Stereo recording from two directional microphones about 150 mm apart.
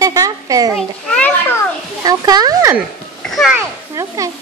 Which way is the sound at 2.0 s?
25° right (ahead or behind).